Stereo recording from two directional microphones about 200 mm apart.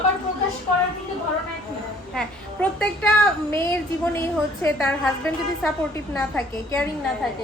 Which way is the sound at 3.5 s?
10° left (ahead or behind).